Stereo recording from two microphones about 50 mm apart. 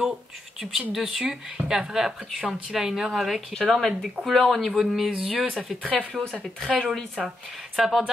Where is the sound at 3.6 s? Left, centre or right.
Centre.